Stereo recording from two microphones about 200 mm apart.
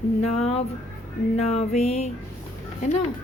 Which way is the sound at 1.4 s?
30° left (ahead or behind).